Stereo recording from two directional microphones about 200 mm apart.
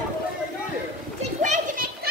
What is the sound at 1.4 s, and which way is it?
Children playing, 40° right (ahead or behind).